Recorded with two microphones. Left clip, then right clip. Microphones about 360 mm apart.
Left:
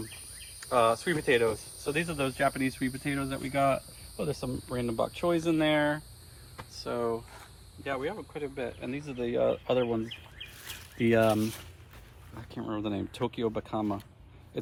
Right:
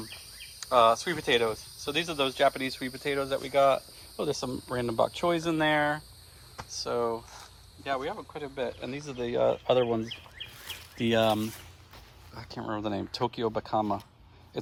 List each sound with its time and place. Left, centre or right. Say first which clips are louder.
0.6 s speech: right 3 dB; centre
10.7 s speech: left 2 dB; centre
12.4 s speech: right 2 dB; centre